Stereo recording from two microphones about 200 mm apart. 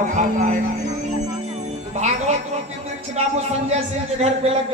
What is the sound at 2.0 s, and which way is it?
A man's voice, 35° right (ahead or behind).